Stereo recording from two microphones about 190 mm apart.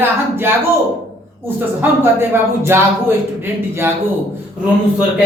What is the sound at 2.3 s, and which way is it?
Speech, 10° right (ahead or behind).